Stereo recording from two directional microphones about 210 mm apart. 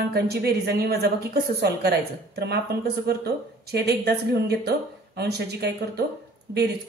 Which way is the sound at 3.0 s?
50° right (ahead or behind).